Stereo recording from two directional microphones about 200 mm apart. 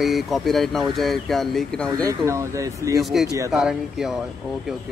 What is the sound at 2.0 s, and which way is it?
Speech, 15° right (ahead or behind).